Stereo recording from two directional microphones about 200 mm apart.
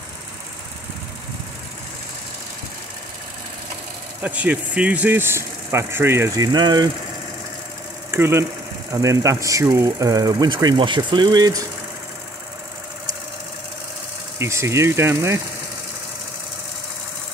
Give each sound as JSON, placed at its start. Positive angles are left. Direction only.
{"t": 4.2, "sound": "speech", "side_deg": -5}
{"t": 8.1, "sound": "speech", "side_deg": -15}
{"t": 14.4, "sound": "speech", "side_deg": -15}